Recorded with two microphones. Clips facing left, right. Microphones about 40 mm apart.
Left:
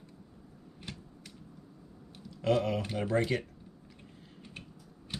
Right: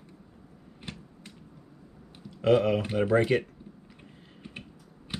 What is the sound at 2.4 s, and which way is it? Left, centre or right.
Speech, right.